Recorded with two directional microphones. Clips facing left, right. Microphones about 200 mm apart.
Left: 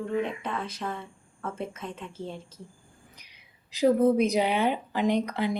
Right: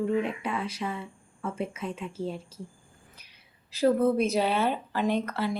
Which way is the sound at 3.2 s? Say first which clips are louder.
Even; 15° left (ahead or behind).